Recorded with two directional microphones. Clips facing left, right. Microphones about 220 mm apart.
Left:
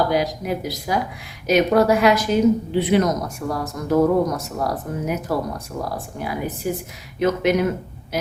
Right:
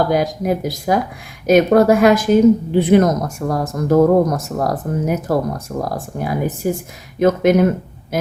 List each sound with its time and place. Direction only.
0.1 s a woman's voice: 50° right (ahead or behind)